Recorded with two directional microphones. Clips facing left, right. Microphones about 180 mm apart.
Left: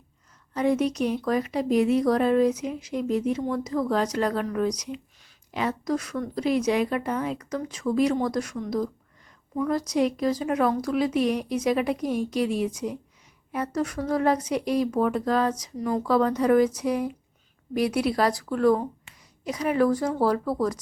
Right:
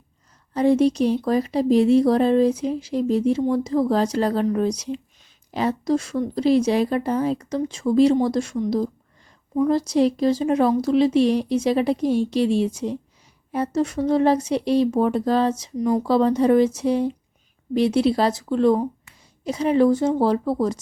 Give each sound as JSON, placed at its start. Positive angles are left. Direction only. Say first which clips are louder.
{"t": 0.5, "sound": "speech", "louder": "right 6 dB", "side_deg": -30}